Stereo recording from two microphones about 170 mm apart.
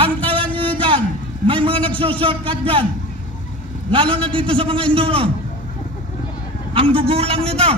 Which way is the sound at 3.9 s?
30° right (ahead or behind).